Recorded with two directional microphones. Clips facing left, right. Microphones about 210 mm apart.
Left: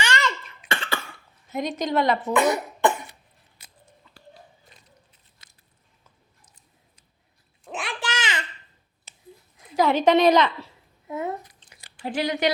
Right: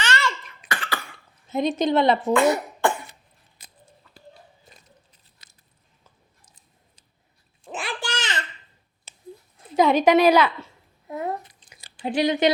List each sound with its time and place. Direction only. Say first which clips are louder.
0.0 s cough: even; 15° left (ahead or behind)
0.7 s cough: left 1 dB; 25° left (ahead or behind)
1.5 s a woman's voice: right 4 dB; 30° right (ahead or behind)
2.3 s cough: right 2 dB; 20° left (ahead or behind)
5.4 s biting: even; 35° right (ahead or behind)
7.6 s a sound: right 1 dB; centre (ahead or behind)
9.7 s a woman's voice: right 2 dB; 15° right (ahead or behind)
11.1 s a sound: even; 25° left (ahead or behind)
11.7 s a sound: right 3 dB; 20° right (ahead or behind)